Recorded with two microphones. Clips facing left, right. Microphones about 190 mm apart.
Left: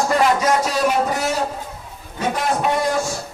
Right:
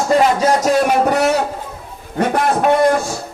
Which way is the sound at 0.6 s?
50° right (ahead or behind).